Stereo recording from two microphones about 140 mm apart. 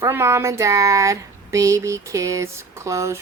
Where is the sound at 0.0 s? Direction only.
20° right (ahead or behind).